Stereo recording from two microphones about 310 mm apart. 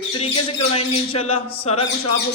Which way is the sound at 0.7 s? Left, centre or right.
Centre.